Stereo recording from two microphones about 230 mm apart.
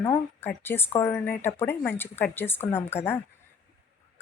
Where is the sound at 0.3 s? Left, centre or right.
Centre.